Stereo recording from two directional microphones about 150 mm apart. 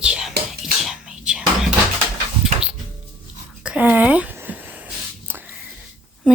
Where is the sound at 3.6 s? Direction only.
10° right (ahead or behind).